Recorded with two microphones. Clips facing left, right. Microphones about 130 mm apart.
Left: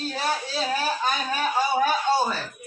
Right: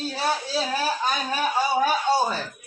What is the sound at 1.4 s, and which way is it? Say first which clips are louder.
Speech: right 1 dB; 10° right (ahead or behind).